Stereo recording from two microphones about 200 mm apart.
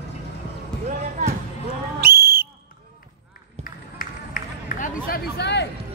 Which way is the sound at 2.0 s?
50° right (ahead or behind).